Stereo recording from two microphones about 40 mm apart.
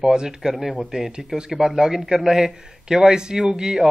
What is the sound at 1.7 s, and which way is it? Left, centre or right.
Speech, centre.